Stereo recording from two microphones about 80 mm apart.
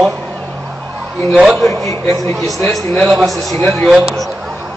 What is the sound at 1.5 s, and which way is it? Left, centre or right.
Speech, centre.